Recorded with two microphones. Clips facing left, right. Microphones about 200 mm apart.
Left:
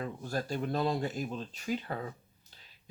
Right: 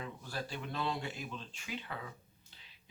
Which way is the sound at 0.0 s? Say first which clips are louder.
Left 7 dB; 45° left (ahead or behind).